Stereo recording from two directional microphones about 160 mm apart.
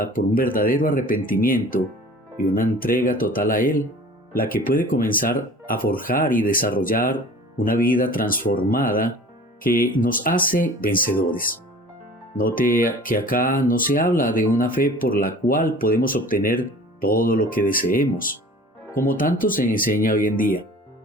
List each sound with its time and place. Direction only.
0.0 s speech: 60° left (ahead or behind)